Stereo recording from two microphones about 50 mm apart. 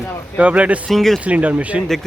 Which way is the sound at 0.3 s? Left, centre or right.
Right.